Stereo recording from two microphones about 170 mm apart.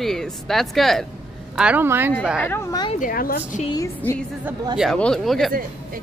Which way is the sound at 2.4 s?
15° left (ahead or behind).